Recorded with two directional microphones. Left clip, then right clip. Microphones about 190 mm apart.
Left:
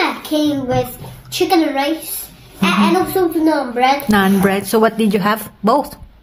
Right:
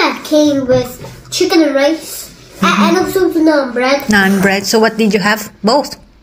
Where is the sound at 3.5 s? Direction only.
15° left (ahead or behind).